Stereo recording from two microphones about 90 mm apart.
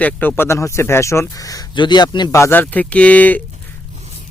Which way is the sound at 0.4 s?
30° left (ahead or behind).